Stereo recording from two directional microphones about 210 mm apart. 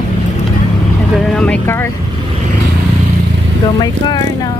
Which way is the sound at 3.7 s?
20° left (ahead or behind).